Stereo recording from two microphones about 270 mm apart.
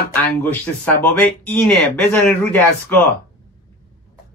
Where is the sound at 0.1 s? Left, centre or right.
Centre.